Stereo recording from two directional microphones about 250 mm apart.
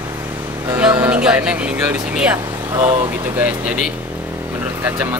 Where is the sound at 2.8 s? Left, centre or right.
Centre.